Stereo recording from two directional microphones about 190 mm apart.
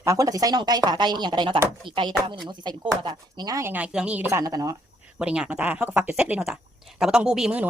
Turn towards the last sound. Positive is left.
turn(degrees=-5)  # may be behind; listen again after turning